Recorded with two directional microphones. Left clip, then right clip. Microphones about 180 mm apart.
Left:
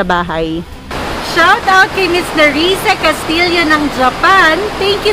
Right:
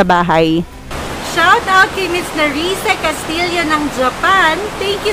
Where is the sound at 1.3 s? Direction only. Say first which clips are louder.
Left 2 dB; centre (ahead or behind).